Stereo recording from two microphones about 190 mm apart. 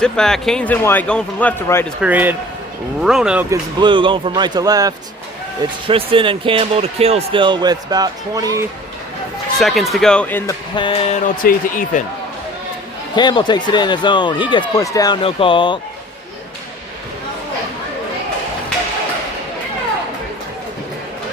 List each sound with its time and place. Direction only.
0.0 s speech: 5° left (ahead or behind)
2.0 s speech: 10° right (ahead or behind)
3.5 s speech: 25° right (ahead or behind)
9.6 s speech: centre (ahead or behind)
10.8 s a sound: 30° left (ahead or behind)
11.4 s speech: 45° left (ahead or behind)
13.1 s speech: 25° left (ahead or behind)